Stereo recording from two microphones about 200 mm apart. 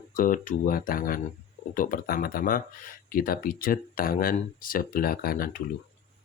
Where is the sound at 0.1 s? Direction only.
45° left (ahead or behind).